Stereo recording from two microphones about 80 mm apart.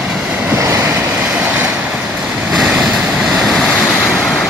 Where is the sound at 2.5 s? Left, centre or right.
Centre.